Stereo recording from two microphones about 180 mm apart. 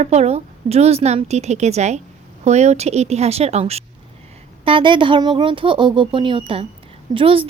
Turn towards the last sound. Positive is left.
turn(degrees=-30)  # may be behind; listen again after turning